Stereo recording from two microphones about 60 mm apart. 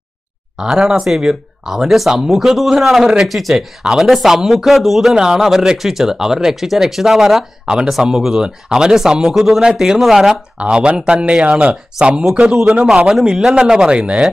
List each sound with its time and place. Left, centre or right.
0.6 s speech: centre
10.6 s speech: centre